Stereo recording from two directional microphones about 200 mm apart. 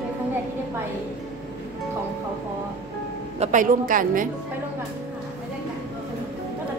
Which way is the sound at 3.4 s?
40° right (ahead or behind).